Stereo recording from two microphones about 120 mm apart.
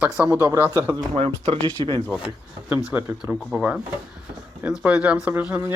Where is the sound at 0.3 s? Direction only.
25° right (ahead or behind).